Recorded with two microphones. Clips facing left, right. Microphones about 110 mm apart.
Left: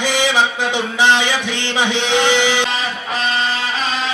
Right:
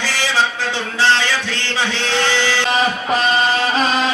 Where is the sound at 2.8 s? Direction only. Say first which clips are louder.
Right 5 dB; 40° right (ahead or behind).